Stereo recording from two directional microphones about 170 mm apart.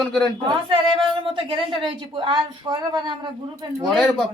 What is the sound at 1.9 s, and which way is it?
A woman's voice, 30° right (ahead or behind).